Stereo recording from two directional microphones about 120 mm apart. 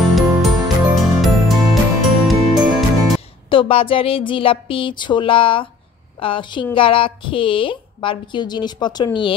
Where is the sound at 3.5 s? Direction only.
50° left (ahead or behind).